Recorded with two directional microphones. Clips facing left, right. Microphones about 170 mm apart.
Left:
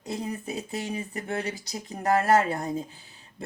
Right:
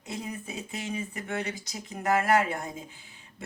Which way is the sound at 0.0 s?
35° left (ahead or behind).